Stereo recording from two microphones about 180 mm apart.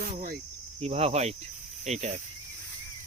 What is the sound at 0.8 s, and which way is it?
Speech, 35° right (ahead or behind).